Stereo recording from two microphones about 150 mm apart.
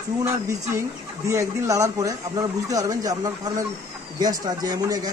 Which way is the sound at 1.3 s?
20° right (ahead or behind).